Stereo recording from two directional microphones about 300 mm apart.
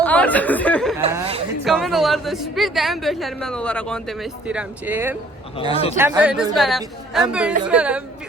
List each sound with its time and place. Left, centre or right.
0.0 s speech: centre
1.1 s speech: centre
1.6 s a woman's voice: centre